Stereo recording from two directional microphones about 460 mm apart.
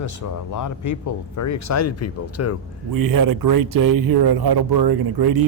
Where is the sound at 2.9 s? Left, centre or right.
Right.